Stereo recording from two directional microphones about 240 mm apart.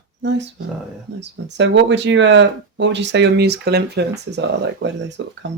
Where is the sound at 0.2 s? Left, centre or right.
Right.